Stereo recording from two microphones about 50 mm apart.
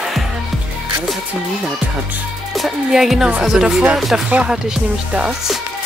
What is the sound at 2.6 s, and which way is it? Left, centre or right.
Speech, centre.